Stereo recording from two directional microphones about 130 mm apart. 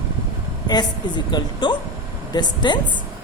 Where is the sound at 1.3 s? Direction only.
35° left (ahead or behind).